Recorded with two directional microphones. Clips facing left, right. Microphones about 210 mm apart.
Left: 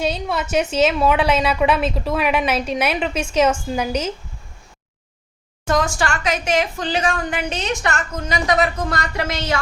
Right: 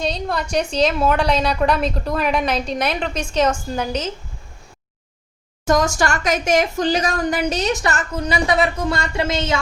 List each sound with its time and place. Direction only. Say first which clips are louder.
0.0 s a woman's voice: left 1 dB; 5° left (ahead or behind)
5.6 s speech: right 2 dB; 40° right (ahead or behind); by 9.6 s 25° right (ahead or behind)